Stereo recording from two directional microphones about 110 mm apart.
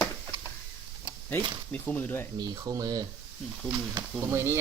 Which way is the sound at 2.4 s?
35° right (ahead or behind).